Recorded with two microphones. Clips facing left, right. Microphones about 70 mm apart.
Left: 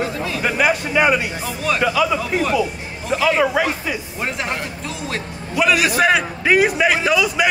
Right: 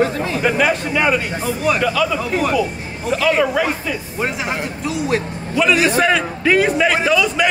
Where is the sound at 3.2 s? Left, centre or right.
Centre.